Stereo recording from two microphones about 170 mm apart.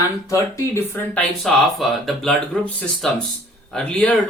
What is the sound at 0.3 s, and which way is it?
Speech, 15° left (ahead or behind).